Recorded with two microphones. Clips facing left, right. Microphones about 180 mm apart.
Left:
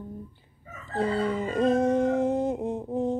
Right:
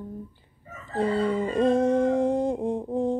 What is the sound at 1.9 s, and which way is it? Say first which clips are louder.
Speech: right 2 dB; 20° left (ahead or behind).